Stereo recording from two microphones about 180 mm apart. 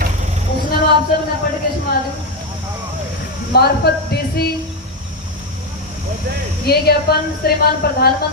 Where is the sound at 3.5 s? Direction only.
60° left (ahead or behind).